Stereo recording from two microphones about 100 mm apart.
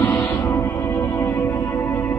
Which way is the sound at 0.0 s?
20° left (ahead or behind).